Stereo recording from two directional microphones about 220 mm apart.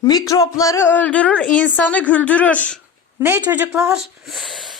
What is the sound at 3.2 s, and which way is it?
Speech, 10° right (ahead or behind).